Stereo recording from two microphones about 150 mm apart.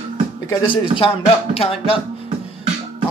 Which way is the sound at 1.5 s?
40° left (ahead or behind).